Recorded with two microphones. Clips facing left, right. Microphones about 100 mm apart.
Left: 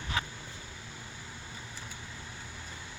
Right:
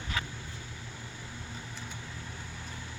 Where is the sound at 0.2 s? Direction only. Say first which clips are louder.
Left 2 dB; 25° left (ahead or behind).